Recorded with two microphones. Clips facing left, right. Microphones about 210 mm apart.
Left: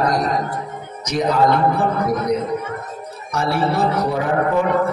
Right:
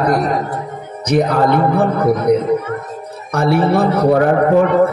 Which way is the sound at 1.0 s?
60° right (ahead or behind).